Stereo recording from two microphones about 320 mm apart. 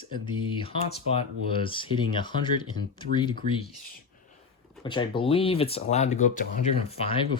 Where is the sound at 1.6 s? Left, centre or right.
Centre.